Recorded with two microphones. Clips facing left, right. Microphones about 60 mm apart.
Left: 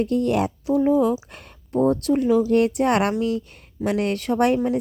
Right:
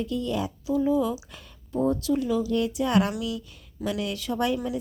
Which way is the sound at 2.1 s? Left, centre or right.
Left.